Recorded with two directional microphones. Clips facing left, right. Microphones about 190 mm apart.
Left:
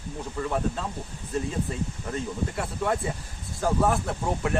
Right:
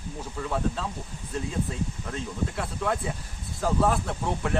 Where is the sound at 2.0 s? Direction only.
5° left (ahead or behind).